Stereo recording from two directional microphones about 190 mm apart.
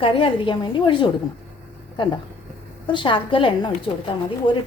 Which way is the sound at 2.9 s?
25° left (ahead or behind).